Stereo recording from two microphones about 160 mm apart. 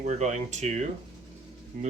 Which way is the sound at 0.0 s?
45° right (ahead or behind).